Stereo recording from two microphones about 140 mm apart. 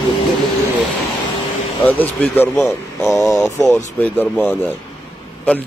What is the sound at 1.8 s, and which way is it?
Speech, 10° left (ahead or behind).